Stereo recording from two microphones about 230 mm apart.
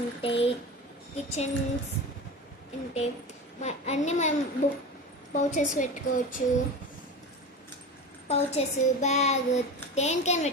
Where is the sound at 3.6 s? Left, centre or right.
Left.